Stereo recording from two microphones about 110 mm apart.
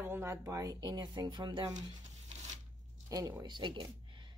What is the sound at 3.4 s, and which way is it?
Speech, 45° right (ahead or behind).